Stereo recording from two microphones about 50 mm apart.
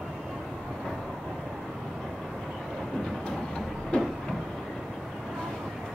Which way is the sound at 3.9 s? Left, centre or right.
Left.